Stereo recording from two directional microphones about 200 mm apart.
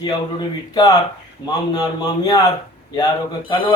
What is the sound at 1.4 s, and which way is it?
Speech, 20° left (ahead or behind).